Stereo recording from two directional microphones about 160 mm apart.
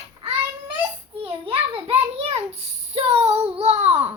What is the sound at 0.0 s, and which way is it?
Child singing, 40° right (ahead or behind).